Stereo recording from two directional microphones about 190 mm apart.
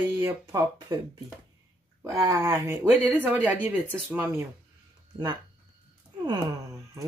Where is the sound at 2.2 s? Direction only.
20° right (ahead or behind).